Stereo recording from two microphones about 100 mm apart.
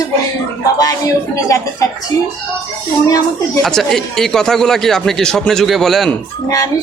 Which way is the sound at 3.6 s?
5° left (ahead or behind).